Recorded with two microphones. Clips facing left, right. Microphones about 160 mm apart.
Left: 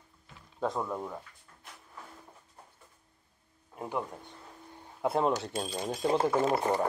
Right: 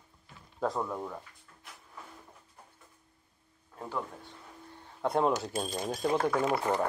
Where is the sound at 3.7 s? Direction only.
20° left (ahead or behind).